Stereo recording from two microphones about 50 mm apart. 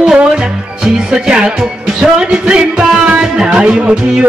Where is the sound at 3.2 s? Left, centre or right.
Centre.